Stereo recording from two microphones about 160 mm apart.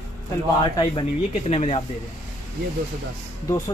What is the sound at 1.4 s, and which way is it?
Speech, 40° left (ahead or behind).